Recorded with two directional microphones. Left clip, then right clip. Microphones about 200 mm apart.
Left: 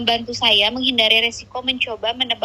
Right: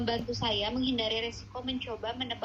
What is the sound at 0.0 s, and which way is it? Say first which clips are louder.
A woman's voice: left 13 dB; 45° left (ahead or behind).